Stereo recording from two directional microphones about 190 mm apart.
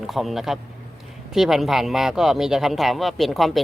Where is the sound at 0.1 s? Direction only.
Centre (ahead or behind).